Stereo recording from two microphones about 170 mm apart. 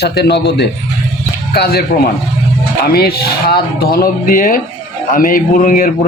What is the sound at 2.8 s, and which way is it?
A man's voice, 70° left (ahead or behind).